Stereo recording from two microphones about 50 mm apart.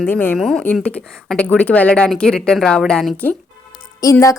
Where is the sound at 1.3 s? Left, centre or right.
Left.